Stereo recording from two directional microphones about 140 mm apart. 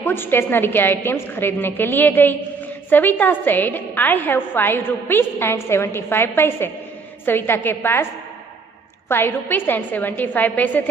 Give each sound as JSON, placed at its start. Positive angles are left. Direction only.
{"t": 0.0, "sound": "a woman's voice", "side_deg": 15}
{"t": 9.0, "sound": "a woman's voice", "side_deg": 15}